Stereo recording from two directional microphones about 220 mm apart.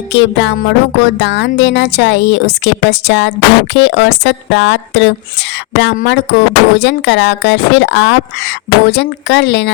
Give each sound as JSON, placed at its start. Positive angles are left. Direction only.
{"t": 0.1, "sound": "speech", "side_deg": 55}